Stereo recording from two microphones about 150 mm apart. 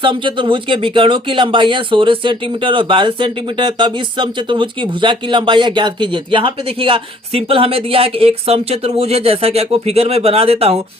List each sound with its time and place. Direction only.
0.0 s speech: 35° right (ahead or behind)